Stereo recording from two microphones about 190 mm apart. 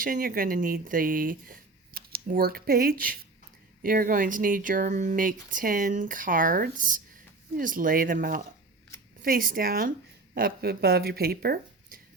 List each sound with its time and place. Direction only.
0.0 s speech: 45° right (ahead or behind)